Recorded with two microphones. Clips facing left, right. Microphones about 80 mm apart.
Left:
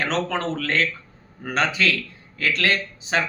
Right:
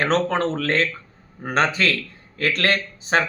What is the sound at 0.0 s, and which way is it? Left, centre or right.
Speech, right.